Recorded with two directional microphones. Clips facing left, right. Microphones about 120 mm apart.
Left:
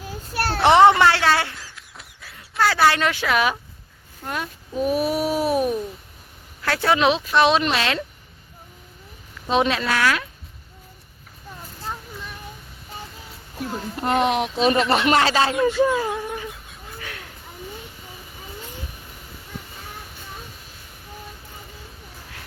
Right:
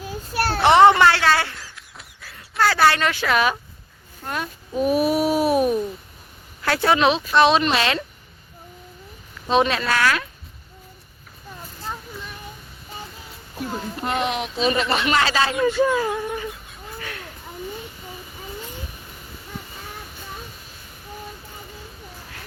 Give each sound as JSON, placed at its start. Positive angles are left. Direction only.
{"t": 0.3, "sound": "a child's voice", "side_deg": -5}
{"t": 1.0, "sound": "speech", "side_deg": 15}
{"t": 1.5, "sound": "a sound", "side_deg": 0}
{"t": 4.8, "sound": "babbling", "side_deg": -10}
{"t": 6.6, "sound": "speech", "side_deg": -5}
{"t": 9.5, "sound": "speech", "side_deg": 10}
{"t": 13.6, "sound": "speech", "side_deg": 0}
{"t": 14.6, "sound": "speech", "side_deg": 50}
{"t": 15.5, "sound": "a sound", "side_deg": 0}